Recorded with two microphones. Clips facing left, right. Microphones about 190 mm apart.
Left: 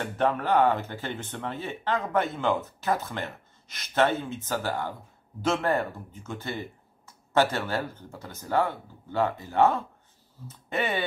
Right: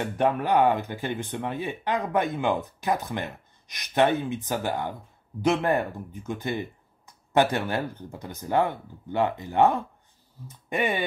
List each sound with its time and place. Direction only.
0.0 s speech: 15° right (ahead or behind)